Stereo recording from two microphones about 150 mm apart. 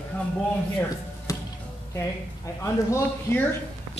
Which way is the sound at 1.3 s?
20° left (ahead or behind).